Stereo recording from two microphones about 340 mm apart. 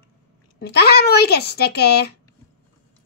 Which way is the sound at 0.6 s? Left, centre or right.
Left.